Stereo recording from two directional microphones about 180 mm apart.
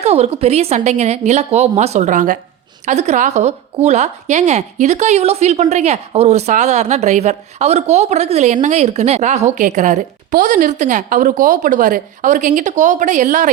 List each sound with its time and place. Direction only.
0.0 s a woman's voice: 35° right (ahead or behind)